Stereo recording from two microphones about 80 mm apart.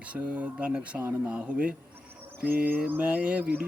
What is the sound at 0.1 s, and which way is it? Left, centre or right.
Speech, centre.